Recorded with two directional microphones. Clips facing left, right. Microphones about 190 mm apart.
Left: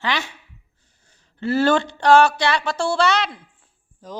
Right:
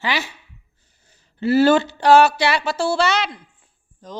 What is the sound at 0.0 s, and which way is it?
Speech, 5° right (ahead or behind).